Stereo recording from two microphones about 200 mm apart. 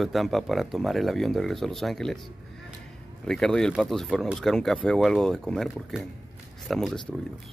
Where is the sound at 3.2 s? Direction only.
5° left (ahead or behind).